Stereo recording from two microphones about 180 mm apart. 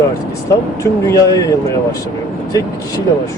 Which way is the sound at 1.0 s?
20° left (ahead or behind).